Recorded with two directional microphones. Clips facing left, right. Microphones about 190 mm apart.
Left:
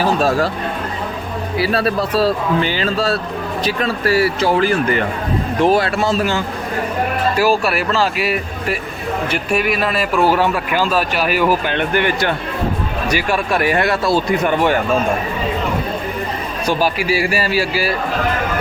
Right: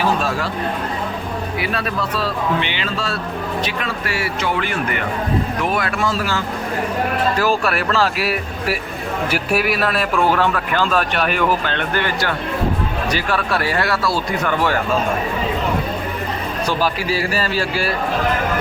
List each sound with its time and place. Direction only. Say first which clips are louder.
0.2 s speech: left 6 dB; 40° left (ahead or behind)
1.5 s speech: left 8 dB; 35° left (ahead or behind)
7.3 s a man's voice: left 3 dB; 5° left (ahead or behind)
16.6 s a man's voice: left 4 dB; 10° left (ahead or behind)